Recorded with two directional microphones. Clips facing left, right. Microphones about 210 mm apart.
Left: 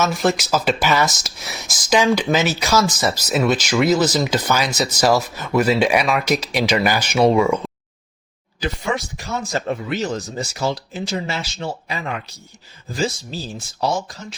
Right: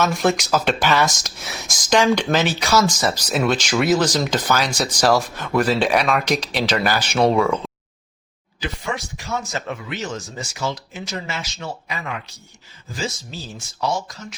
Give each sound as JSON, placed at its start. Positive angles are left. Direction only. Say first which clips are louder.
{"t": 0.0, "sound": "speech", "louder": "even", "side_deg": 0}
{"t": 8.6, "sound": "speech", "louder": "left 4 dB", "side_deg": 40}
{"t": 13.8, "sound": "speech", "louder": "left 2 dB", "side_deg": 30}